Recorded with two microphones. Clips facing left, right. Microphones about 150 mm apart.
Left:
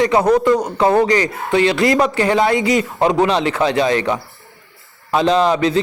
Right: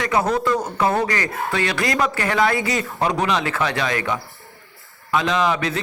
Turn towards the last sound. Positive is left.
turn(degrees=30)  # may be behind; listen again after turning